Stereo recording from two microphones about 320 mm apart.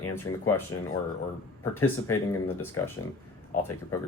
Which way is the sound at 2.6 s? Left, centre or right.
Centre.